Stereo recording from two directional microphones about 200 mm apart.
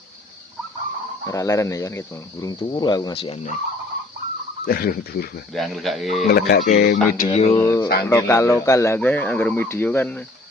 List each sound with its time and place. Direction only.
1.3 s speech: 15° left (ahead or behind); by 3.6 s 35° left (ahead or behind)
4.6 s speech: 50° left (ahead or behind)
5.5 s speech: centre (ahead or behind)
6.2 s speech: 50° left (ahead or behind)
7.3 s speech: 35° left (ahead or behind)
7.5 s speech: 15° left (ahead or behind)